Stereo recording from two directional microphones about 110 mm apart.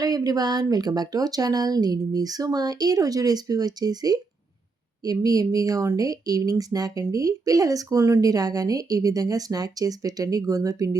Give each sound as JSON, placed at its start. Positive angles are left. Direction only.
{"t": 0.0, "sound": "speech", "side_deg": -35}